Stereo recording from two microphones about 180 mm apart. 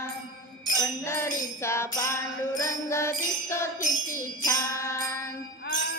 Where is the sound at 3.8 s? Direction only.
45° left (ahead or behind).